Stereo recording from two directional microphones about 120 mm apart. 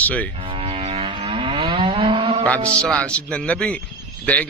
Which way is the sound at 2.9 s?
10° left (ahead or behind).